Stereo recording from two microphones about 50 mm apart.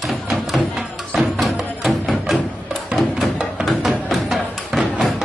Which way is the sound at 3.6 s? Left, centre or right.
Centre.